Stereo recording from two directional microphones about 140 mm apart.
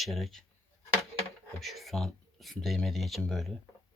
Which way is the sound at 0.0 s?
Centre (ahead or behind).